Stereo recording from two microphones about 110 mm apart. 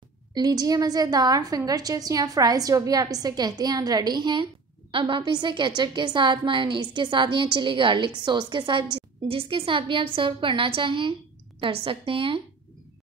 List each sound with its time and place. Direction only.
0.3 s a woman's voice: 35° right (ahead or behind)
8.9 s a woman's voice: 55° right (ahead or behind)